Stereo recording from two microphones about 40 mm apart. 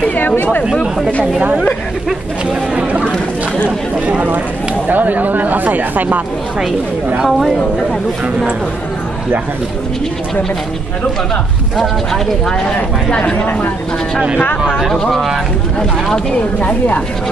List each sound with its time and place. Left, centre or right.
2.7 s a sound: right
4.8 s speech: right
7.2 s speech: centre
11.7 s speech: centre
13.4 s a woman's voice: left
15.0 s speech: centre